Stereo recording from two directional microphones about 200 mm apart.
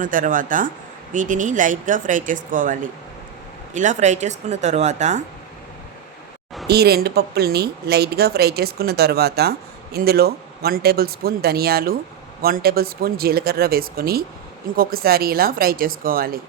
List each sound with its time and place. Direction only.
0.0 s speech: 40° right (ahead or behind)
3.8 s speech: 40° right (ahead or behind)
6.7 s speech: 55° right (ahead or behind)